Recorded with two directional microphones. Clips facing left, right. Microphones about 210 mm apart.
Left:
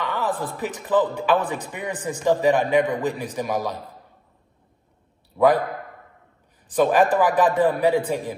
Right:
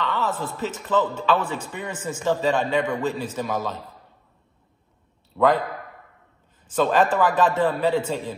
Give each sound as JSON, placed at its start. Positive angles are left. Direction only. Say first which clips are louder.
{"t": 0.0, "sound": "a sound", "louder": "even", "side_deg": 15}
{"t": 0.6, "sound": "a man's voice", "louder": "left 2 dB", "side_deg": 15}
{"t": 6.7, "sound": "a man's voice", "louder": "left 2 dB", "side_deg": 15}